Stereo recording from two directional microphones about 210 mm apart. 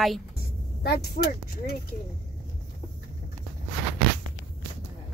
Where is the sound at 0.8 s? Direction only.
50° left (ahead or behind).